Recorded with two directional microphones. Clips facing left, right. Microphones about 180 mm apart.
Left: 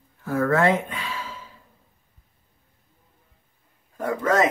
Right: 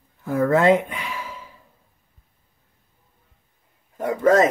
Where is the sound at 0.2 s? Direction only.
15° right (ahead or behind).